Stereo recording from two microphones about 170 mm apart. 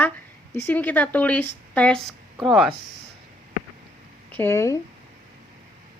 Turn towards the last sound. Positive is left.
turn(degrees=15)  # may be behind; listen again after turning